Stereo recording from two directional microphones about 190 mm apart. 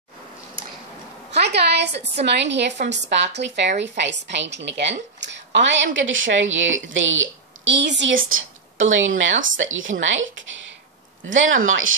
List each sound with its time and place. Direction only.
1.4 s a sound: 60° right (ahead or behind)
2.2 s a woman's voice: 65° right (ahead or behind)
8.3 s speech: 90° right